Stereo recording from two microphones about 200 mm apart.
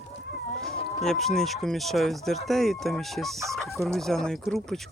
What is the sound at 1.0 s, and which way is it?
Speech, centre (ahead or behind).